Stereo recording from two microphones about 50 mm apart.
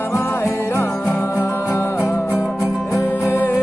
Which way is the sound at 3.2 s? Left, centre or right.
Left.